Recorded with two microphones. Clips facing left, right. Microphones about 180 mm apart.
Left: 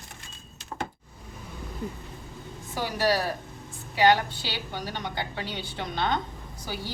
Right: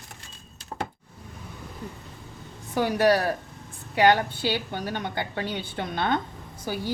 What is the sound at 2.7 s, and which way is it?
A woman's voice, 55° right (ahead or behind).